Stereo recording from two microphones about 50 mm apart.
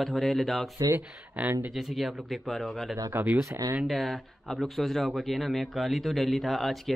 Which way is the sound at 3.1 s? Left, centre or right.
Right.